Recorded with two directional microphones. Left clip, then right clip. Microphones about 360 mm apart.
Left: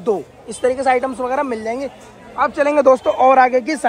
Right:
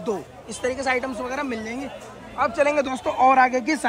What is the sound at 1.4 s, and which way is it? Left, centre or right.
Speech, centre.